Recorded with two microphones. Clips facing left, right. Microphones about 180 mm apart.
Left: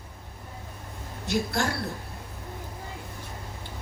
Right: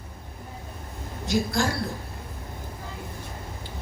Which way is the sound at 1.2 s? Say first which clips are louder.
Right 2 dB; 65° left (ahead or behind).